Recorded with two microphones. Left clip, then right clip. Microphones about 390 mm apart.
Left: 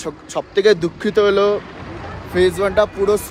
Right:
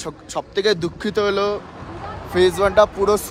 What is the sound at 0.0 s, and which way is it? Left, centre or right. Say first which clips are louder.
Speech: left 3 dB; centre.